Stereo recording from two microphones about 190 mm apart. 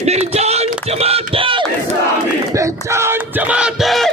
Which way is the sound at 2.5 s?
15° right (ahead or behind).